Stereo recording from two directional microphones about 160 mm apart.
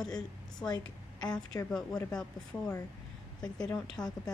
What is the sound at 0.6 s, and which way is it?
Speech, 5° left (ahead or behind).